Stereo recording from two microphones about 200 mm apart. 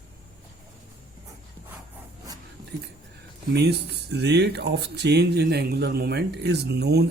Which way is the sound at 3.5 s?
55° right (ahead or behind).